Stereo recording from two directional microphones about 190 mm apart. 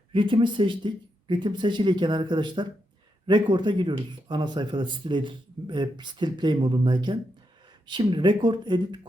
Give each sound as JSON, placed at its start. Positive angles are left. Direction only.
{"t": 0.1, "sound": "speech", "side_deg": -25}